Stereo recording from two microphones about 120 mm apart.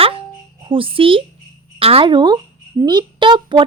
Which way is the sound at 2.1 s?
35° right (ahead or behind).